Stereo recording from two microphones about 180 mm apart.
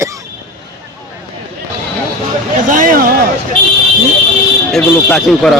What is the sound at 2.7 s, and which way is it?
Speech, 50° right (ahead or behind).